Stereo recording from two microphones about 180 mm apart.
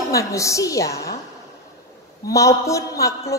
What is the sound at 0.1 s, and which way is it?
Speech, 15° left (ahead or behind).